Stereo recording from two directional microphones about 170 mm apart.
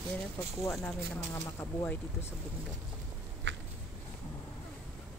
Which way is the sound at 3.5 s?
90° right.